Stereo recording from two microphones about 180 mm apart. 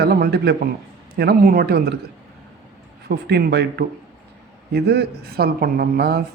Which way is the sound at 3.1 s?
65° right (ahead or behind).